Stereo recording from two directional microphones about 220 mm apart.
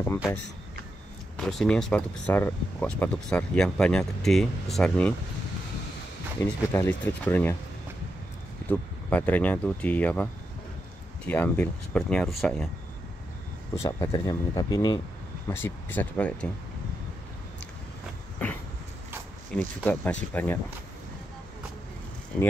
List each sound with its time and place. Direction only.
1.3 s speech: centre (ahead or behind)
6.4 s speech: 10° left (ahead or behind)
8.6 s speech: 10° left (ahead or behind)
13.7 s speech: 15° left (ahead or behind)
18.4 s a sound: 5° left (ahead or behind)
19.5 s speech: 5° left (ahead or behind)